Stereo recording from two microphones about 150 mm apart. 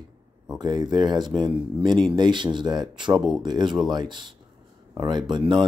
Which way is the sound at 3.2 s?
Centre (ahead or behind).